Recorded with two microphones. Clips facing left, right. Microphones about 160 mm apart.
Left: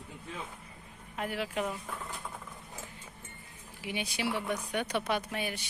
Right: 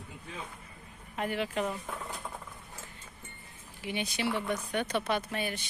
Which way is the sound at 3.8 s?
10° left (ahead or behind).